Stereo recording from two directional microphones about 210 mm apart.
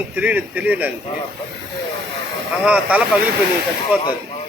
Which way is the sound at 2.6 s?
5° right (ahead or behind).